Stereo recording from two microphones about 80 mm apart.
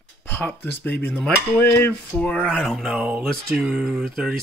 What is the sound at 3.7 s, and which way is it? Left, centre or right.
Speech, centre.